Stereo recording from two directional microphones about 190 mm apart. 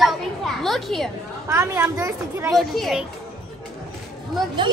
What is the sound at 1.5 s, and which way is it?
Speech, 15° right (ahead or behind).